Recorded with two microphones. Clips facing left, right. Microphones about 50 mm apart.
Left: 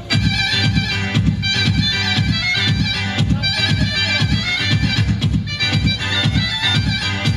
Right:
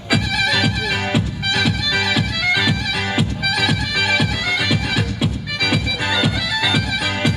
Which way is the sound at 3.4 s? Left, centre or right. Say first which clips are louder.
Right 1 dB; centre.